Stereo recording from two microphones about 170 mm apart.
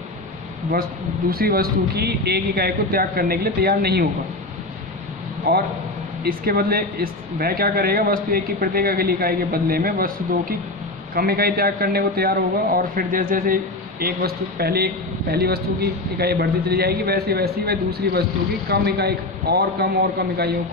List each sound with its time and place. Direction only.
1.3 s a man's voice: 60° right (ahead or behind)
6.2 s a man's voice: 60° right (ahead or behind)
11.1 s a man's voice: 60° right (ahead or behind)